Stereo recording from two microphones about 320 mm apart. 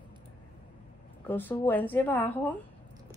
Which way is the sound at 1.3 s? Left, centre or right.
Centre.